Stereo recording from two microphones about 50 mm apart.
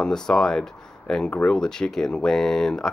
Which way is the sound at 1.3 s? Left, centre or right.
Left.